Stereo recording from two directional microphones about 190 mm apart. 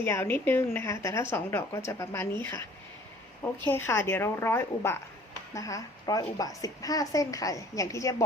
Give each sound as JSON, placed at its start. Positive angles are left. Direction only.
{"t": 0.0, "sound": "a woman's voice", "side_deg": 10}